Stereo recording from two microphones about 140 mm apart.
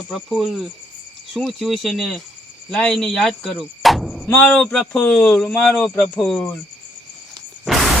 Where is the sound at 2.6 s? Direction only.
5° left (ahead or behind).